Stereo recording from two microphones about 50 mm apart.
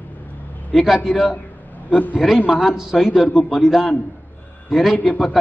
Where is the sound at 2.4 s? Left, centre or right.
Centre.